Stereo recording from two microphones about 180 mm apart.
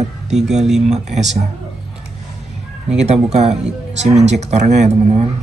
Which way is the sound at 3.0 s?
40° right (ahead or behind).